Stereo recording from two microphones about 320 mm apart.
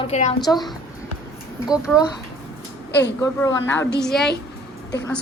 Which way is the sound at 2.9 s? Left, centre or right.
Left.